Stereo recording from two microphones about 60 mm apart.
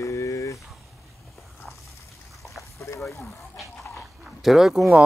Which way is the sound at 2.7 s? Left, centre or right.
Left.